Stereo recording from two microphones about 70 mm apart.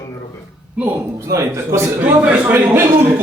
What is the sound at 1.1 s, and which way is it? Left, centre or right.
Speech, right.